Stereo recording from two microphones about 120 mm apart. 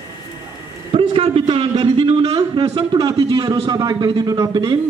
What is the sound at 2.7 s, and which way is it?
A man's voice, 45° right (ahead or behind).